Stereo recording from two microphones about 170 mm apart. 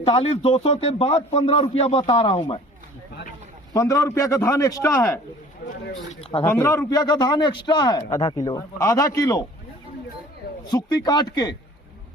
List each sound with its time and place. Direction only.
0.0 s speech: 35° left (ahead or behind)
3.7 s a man's voice: 20° left (ahead or behind)
6.4 s a man's voice: 15° left (ahead or behind)
10.7 s a man's voice: 25° left (ahead or behind)